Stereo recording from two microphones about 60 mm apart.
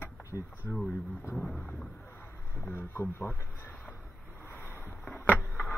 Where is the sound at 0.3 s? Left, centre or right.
Left.